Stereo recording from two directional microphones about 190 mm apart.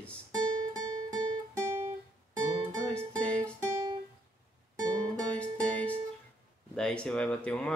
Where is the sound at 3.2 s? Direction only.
5° left (ahead or behind).